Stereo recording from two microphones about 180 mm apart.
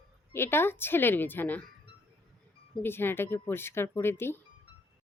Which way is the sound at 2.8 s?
10° left (ahead or behind).